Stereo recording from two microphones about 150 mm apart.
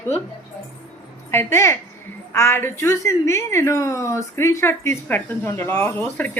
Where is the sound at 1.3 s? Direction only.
15° left (ahead or behind).